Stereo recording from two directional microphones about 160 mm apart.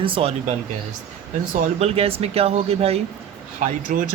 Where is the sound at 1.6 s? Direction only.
40° right (ahead or behind).